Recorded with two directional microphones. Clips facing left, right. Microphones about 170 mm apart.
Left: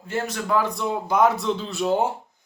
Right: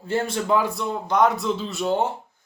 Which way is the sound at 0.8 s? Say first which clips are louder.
Even; 5° left (ahead or behind).